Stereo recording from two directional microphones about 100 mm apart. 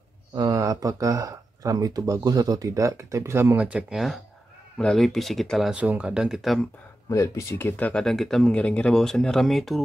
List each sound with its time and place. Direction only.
0.4 s speech: 35° right (ahead or behind)
3.5 s speech: 10° right (ahead or behind)
4.7 s speech: 5° left (ahead or behind)
5.8 s speech: 10° right (ahead or behind)
7.1 s speech: 30° left (ahead or behind)
8.0 s speech: 5° left (ahead or behind)